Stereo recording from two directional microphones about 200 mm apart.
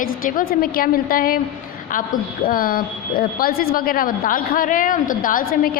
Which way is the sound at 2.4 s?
45° left (ahead or behind).